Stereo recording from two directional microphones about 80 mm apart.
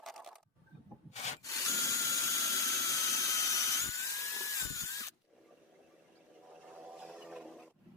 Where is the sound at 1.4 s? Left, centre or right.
Left.